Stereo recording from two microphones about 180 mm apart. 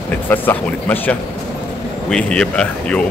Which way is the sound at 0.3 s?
10° left (ahead or behind).